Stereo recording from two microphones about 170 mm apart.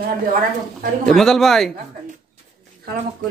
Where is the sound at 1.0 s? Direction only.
Centre (ahead or behind).